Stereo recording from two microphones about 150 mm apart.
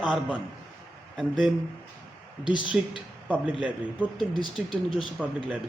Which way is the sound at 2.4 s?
30° left (ahead or behind).